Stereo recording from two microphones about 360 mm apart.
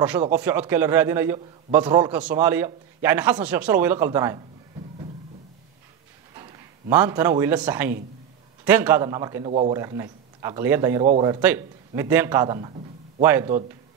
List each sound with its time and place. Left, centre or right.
0.0 s a man's voice: centre
6.3 s a man's voice: centre